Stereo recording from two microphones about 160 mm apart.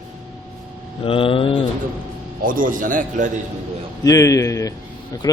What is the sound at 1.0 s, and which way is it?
Speech, 35° left (ahead or behind).